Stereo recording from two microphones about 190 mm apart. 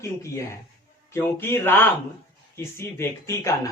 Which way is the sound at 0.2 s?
15° left (ahead or behind).